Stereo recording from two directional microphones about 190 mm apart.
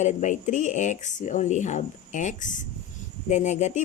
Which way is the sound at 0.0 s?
40° left (ahead or behind).